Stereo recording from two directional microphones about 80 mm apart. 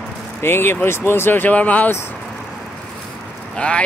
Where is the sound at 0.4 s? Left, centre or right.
Left.